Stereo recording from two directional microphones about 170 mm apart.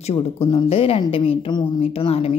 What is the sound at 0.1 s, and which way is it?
A woman's voice, 30° left (ahead or behind).